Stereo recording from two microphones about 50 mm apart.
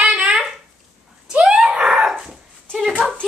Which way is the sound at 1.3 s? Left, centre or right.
Centre.